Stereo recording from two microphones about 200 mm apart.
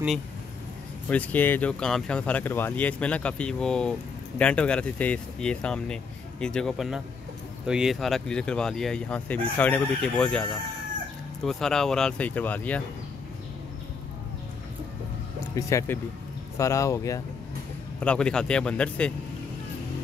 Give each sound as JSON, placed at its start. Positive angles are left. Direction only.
{"t": 1.0, "sound": "speech", "side_deg": 10}
{"t": 11.4, "sound": "speech", "side_deg": 0}
{"t": 15.5, "sound": "speech", "side_deg": 15}
{"t": 18.0, "sound": "speech", "side_deg": 5}